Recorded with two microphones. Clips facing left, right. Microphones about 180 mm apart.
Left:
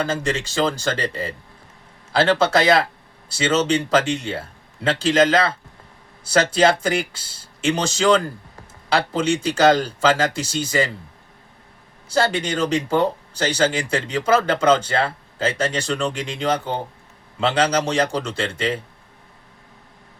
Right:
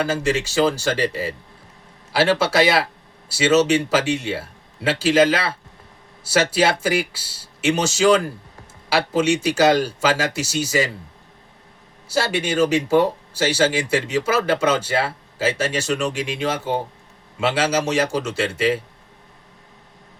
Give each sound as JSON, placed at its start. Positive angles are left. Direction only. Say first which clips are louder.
{"t": 0.0, "sound": "speech", "louder": "right 2 dB", "side_deg": -5}
{"t": 12.0, "sound": "speech", "louder": "left 1 dB", "side_deg": -5}